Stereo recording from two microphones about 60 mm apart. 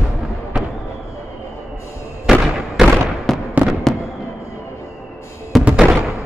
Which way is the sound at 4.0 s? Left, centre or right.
Left.